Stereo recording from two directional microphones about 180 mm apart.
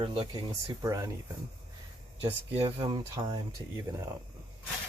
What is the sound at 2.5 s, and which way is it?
Speech, 30° right (ahead or behind).